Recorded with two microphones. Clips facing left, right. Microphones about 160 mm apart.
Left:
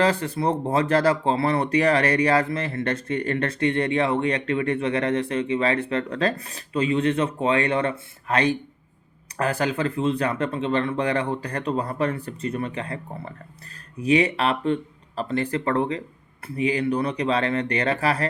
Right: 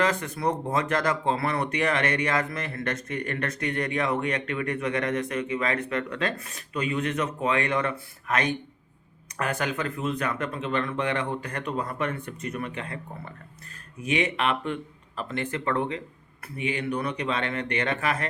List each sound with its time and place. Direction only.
0.0 s speech: 30° left (ahead or behind)